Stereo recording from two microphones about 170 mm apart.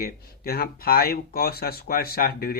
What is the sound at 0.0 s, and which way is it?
Speech, 60° left (ahead or behind).